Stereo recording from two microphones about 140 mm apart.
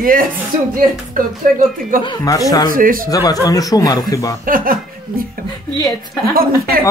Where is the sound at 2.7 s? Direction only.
85° right.